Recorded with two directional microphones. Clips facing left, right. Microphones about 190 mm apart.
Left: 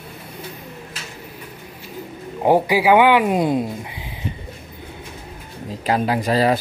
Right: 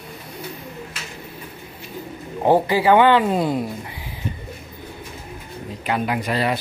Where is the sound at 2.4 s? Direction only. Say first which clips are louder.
Left 1 dB; 10° left (ahead or behind).